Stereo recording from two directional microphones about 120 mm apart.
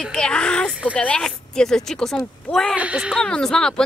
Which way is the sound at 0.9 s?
10° left (ahead or behind).